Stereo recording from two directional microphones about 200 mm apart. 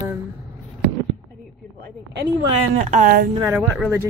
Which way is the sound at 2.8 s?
35° right (ahead or behind).